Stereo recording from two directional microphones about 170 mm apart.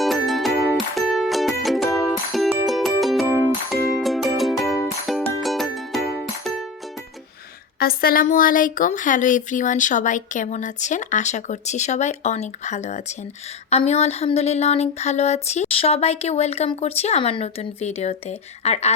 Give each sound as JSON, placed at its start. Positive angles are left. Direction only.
{"t": 0.0, "sound": "music", "side_deg": 0}
{"t": 7.8, "sound": "speech", "side_deg": 60}
{"t": 13.7, "sound": "a sound", "side_deg": 40}